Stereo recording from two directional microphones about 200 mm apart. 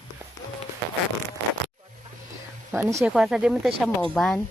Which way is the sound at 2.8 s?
15° right (ahead or behind).